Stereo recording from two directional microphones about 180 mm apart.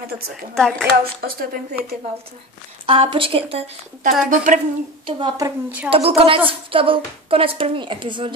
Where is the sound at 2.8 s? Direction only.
30° right (ahead or behind).